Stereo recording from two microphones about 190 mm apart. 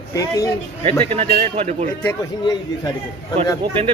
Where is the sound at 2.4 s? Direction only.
20° left (ahead or behind).